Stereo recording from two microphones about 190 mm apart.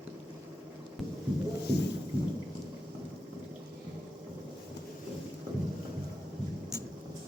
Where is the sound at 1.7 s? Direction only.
60° left (ahead or behind).